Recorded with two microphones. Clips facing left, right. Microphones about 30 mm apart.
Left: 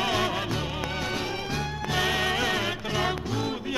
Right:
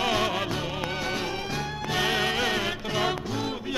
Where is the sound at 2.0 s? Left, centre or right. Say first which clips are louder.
Right 1 dB; right.